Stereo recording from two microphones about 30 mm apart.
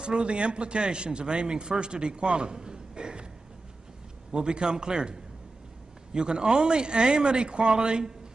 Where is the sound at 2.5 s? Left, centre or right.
Right.